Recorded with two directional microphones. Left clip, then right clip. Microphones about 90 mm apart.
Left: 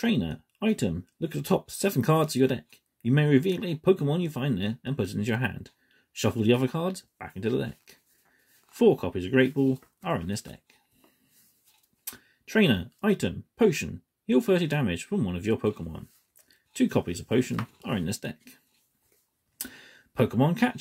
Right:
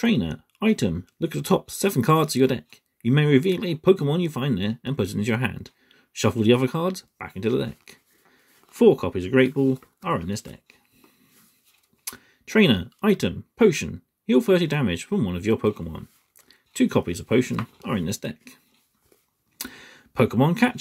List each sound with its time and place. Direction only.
0.0 s speech: 30° right (ahead or behind)
10.0 s speech: 10° right (ahead or behind)
12.0 s speech: 25° right (ahead or behind)
19.6 s speech: 30° right (ahead or behind)